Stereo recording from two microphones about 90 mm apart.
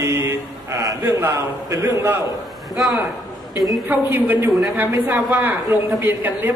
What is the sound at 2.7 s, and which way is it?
Speech, centre (ahead or behind).